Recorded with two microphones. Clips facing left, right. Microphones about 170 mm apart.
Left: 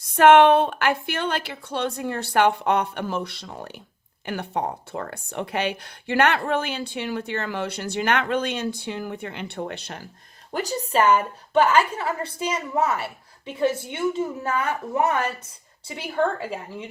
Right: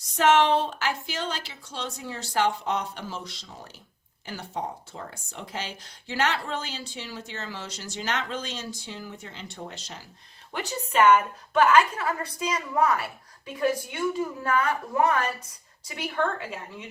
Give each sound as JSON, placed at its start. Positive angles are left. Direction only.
{"t": 0.0, "sound": "speech", "side_deg": 55}
{"t": 10.5, "sound": "a woman's voice", "side_deg": 35}